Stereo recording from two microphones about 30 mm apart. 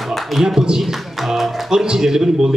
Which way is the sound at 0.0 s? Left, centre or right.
Centre.